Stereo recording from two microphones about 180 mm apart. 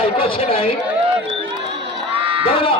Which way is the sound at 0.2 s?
30° left (ahead or behind).